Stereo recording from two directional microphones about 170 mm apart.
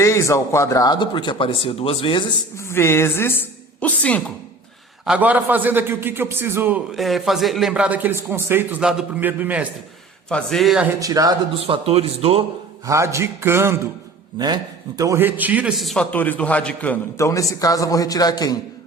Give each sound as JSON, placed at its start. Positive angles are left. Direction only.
{"t": 0.0, "sound": "speech", "side_deg": 15}
{"t": 2.6, "sound": "a man's voice", "side_deg": 15}
{"t": 5.0, "sound": "a man's voice", "side_deg": -10}
{"t": 10.2, "sound": "a man's voice", "side_deg": 5}
{"t": 11.0, "sound": "speech", "side_deg": -20}
{"t": 11.6, "sound": "speech", "side_deg": -35}
{"t": 12.8, "sound": "a man's voice", "side_deg": -15}